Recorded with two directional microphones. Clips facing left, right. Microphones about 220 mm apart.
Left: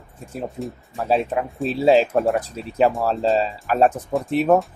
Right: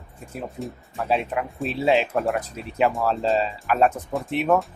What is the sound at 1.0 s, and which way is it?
Speech, 30° left (ahead or behind).